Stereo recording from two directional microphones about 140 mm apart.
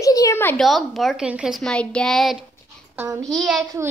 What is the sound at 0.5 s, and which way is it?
A child's voice, centre (ahead or behind).